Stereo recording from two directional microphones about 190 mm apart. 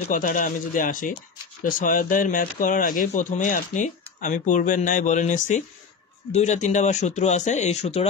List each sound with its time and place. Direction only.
0.1 s speech: 45° left (ahead or behind)